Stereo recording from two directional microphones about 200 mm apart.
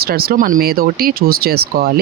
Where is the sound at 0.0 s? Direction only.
50° right (ahead or behind).